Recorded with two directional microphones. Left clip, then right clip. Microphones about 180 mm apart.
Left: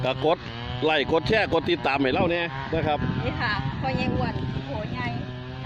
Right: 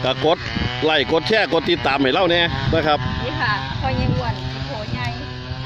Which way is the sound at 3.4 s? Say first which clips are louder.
Right 7 dB; 60° left (ahead or behind).